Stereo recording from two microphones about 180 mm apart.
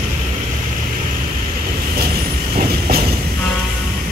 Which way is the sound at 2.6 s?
55° right (ahead or behind).